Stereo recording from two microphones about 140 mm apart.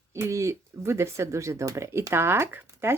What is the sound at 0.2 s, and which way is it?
Speech, 20° right (ahead or behind).